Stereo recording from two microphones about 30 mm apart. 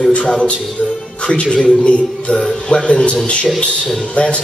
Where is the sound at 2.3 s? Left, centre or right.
Left.